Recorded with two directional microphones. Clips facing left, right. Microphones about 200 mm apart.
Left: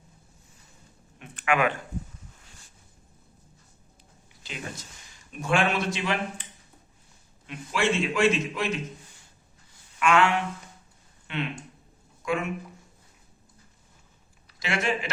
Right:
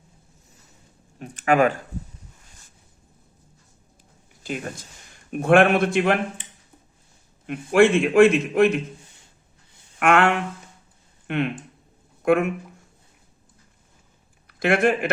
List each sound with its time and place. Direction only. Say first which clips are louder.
1.4 s speech: right 6 dB; 40° right (ahead or behind)
4.4 s a man's voice: right 8 dB; 50° right (ahead or behind)
7.4 s a man's voice: right 10 dB; 55° right (ahead or behind)
10.0 s a man's voice: right 4 dB; 55° right (ahead or behind)
14.4 s speech: right 9 dB; 55° right (ahead or behind)